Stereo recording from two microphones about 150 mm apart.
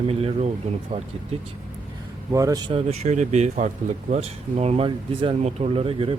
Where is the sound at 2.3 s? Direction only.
20° right (ahead or behind).